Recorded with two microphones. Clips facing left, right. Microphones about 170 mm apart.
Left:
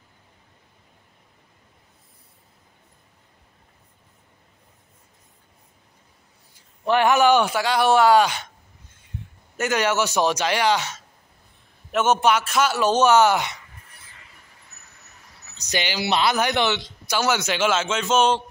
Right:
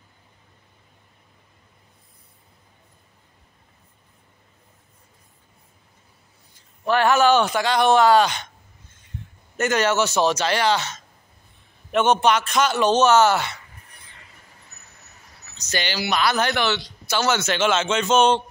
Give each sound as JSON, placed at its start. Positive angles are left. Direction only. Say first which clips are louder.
{"t": 6.5, "sound": "a man's voice", "louder": "left 1 dB", "side_deg": 15}
{"t": 9.6, "sound": "a man's voice", "louder": "right 2 dB", "side_deg": 10}
{"t": 15.5, "sound": "speech", "louder": "even", "side_deg": 15}
{"t": 16.1, "sound": "a man's voice", "louder": "left 1 dB", "side_deg": 25}